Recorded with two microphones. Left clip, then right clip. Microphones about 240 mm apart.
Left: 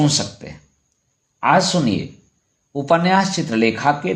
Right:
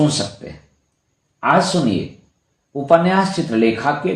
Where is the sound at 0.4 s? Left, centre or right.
Left.